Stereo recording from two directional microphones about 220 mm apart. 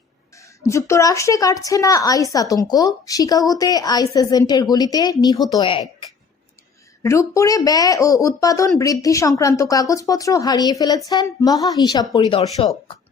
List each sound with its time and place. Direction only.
0.6 s a woman's voice: 15° left (ahead or behind)